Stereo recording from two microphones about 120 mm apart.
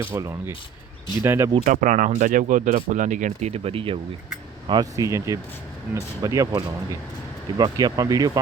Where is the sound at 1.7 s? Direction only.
90° right; by 4.0 s 50° right (ahead or behind).